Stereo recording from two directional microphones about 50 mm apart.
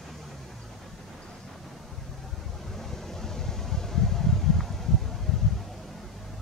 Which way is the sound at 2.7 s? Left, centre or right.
Centre.